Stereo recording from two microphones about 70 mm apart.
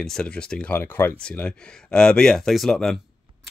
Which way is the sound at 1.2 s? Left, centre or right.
Centre.